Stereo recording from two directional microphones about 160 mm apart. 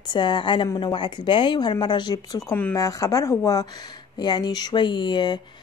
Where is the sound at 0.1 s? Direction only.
30° left (ahead or behind).